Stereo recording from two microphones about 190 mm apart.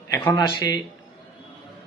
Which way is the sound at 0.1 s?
20° left (ahead or behind).